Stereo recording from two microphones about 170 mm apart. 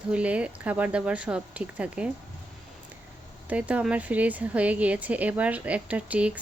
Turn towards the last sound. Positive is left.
turn(degrees=-5)  # may be behind; listen again after turning